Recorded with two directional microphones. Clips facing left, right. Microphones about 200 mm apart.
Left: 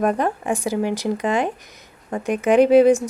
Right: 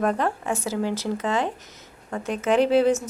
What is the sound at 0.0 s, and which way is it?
A woman's voice, 15° left (ahead or behind).